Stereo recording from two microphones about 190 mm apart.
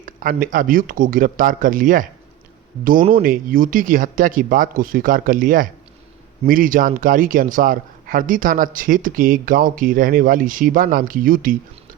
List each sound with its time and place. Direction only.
0.0 s a man's voice: 50° right (ahead or behind)
3.2 s a man's voice: 45° right (ahead or behind)